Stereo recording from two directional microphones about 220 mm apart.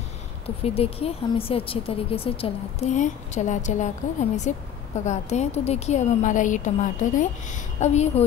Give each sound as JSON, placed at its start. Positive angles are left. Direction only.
{"t": 0.7, "sound": "a woman's voice", "side_deg": 25}